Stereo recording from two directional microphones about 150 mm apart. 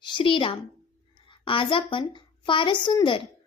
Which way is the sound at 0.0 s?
30° left (ahead or behind).